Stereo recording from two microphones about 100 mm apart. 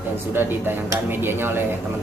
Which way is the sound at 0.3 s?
20° right (ahead or behind).